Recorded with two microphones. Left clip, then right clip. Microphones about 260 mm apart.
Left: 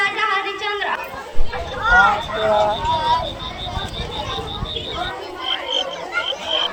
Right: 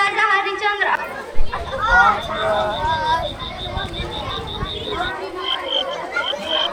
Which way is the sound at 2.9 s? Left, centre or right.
Right.